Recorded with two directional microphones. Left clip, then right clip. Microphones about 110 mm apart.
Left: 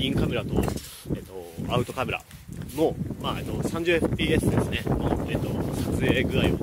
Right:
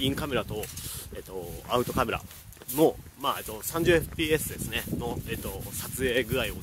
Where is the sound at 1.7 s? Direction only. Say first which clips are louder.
Right 1 dB; 30° right (ahead or behind).